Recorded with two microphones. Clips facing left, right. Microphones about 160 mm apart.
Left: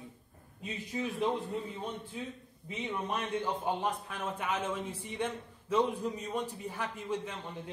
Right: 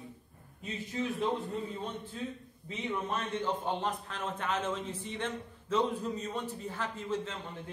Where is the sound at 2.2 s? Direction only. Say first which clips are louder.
Right 3 dB; 10° left (ahead or behind).